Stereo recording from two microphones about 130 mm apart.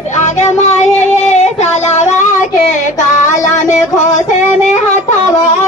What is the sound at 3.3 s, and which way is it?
Music, 70° left (ahead or behind).